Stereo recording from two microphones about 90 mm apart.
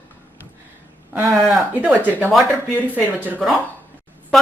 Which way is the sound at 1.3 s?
Centre (ahead or behind).